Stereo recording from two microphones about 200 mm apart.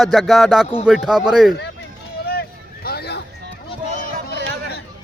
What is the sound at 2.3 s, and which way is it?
Vehicle, 50° left (ahead or behind).